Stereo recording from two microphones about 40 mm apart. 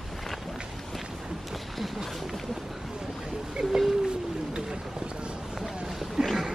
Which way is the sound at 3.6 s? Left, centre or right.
Centre.